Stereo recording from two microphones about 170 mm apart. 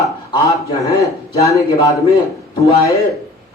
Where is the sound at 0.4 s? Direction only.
20° left (ahead or behind).